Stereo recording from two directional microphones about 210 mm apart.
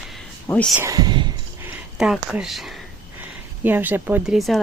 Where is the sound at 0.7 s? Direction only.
15° right (ahead or behind).